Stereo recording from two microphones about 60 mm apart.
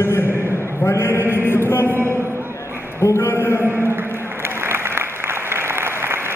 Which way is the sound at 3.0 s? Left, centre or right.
Left.